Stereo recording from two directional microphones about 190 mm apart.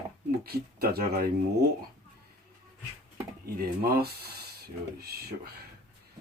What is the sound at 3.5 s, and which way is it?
Speech, 55° right (ahead or behind).